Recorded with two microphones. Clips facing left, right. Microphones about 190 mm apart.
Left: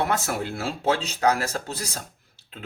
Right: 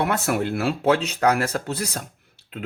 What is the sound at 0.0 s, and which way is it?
Speech, 60° right (ahead or behind).